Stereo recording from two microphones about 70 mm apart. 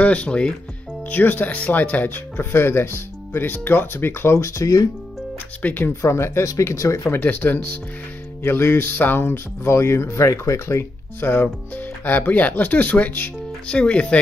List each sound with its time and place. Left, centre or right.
0.0 s speech: centre
1.1 s speech: left
5.6 s speech: left
6.0 s speech: left
7.1 s speech: left